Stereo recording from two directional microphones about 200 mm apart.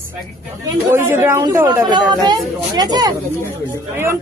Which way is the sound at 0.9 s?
10° right (ahead or behind).